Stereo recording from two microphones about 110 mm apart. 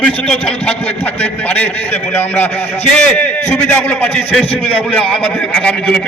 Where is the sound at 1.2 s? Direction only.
15° left (ahead or behind).